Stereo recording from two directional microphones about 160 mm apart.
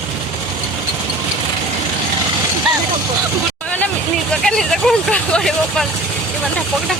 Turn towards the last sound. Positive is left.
turn(degrees=5)  # may be behind; listen again after turning